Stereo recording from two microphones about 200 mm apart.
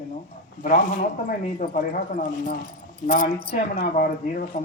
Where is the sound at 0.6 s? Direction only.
40° left (ahead or behind).